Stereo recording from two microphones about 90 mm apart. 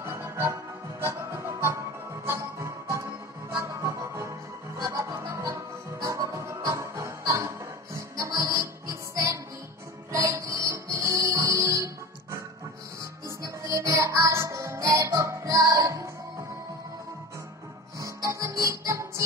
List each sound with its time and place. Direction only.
0.0 s music: 30° right (ahead or behind)
13.4 s music: 35° right (ahead or behind)
17.9 s music: 35° right (ahead or behind)